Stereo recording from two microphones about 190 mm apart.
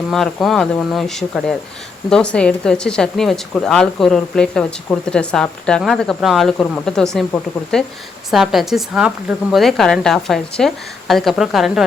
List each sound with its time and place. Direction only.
0.1 s speech: centre (ahead or behind)